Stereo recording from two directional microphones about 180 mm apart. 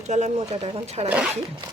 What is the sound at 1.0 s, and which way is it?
Speech, 5° right (ahead or behind).